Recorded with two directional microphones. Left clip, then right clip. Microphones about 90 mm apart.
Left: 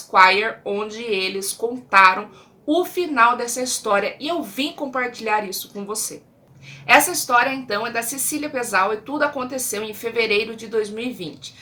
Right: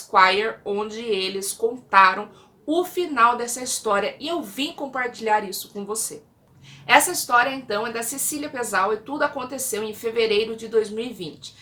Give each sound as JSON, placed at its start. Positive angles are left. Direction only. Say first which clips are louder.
{"t": 0.1, "sound": "a woman's voice", "louder": "left 3 dB", "side_deg": 25}